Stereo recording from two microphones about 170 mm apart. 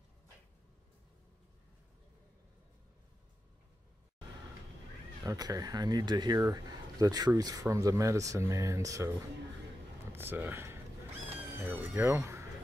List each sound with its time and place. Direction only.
5.2 s speech: 20° right (ahead or behind)
10.1 s speech: 10° right (ahead or behind)